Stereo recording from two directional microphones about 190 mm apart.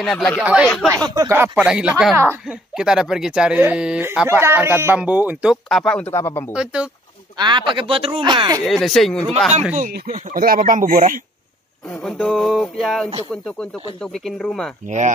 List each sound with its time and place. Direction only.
0.0 s speech: 5° left (ahead or behind)
0.8 s speech: 20° right (ahead or behind); by 6.4 s 15° left (ahead or behind)
6.5 s speech: 5° right (ahead or behind)
7.3 s speech: 25° right (ahead or behind)
8.6 s speech: centre (ahead or behind)
9.8 s speech: 45° right (ahead or behind)
12.0 s speech: 5° left (ahead or behind)
14.1 s speech: centre (ahead or behind)